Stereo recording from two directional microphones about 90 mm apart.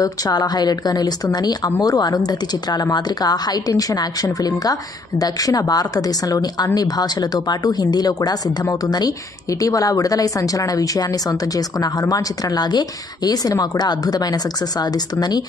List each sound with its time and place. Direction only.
0.0 s a woman's voice: 45° left (ahead or behind)